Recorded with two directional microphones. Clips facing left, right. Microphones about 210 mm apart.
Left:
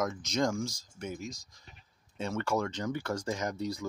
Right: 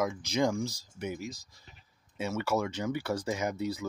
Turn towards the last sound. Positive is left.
turn(degrees=-5)  # may be behind; listen again after turning